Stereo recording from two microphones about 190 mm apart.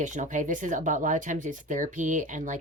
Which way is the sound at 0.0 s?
40° right (ahead or behind).